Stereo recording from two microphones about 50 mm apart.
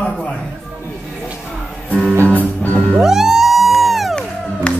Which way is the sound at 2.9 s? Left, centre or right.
Centre.